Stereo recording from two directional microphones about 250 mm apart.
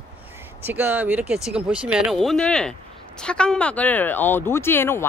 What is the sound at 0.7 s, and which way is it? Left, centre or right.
Speech, centre.